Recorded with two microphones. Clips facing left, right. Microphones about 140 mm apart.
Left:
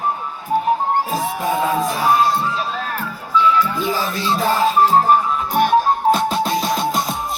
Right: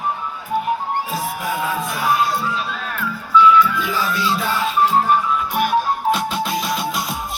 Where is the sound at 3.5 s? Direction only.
35° left (ahead or behind).